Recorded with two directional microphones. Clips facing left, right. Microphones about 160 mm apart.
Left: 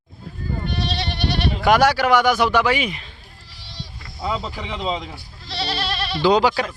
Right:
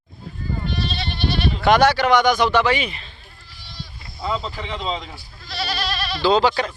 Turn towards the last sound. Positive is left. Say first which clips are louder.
# left 1 dB
turn(degrees=10)  # may be behind; listen again after turning